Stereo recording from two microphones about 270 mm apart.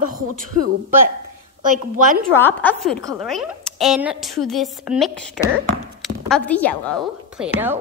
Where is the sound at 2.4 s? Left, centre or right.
Centre.